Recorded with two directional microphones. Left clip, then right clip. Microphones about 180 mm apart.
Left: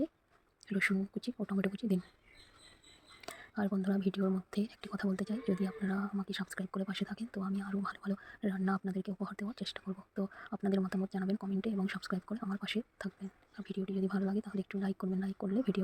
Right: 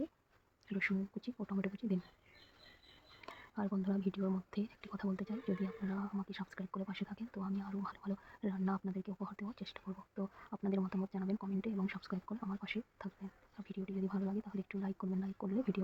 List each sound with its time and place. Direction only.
0.7 s speech: 15° left (ahead or behind)
3.2 s speech: 15° left (ahead or behind)